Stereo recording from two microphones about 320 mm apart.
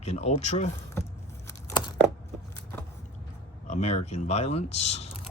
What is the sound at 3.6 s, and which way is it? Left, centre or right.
Speech, left.